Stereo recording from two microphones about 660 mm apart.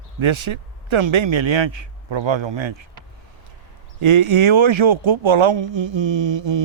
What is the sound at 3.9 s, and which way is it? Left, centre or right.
Speech, right.